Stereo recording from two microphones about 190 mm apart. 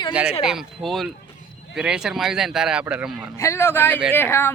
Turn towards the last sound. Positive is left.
turn(degrees=10)  # may be behind; listen again after turning